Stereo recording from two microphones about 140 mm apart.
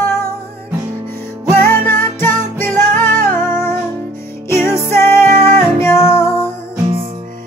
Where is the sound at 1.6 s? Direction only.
15° left (ahead or behind).